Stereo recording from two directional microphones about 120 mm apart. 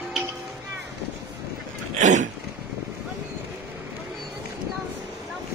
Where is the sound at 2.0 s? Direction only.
90° right.